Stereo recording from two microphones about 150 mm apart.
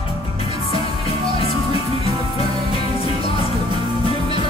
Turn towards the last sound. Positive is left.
turn(degrees=40)  # may be behind; listen again after turning